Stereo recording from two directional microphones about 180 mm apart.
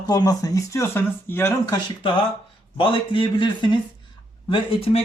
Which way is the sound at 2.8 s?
30° left (ahead or behind).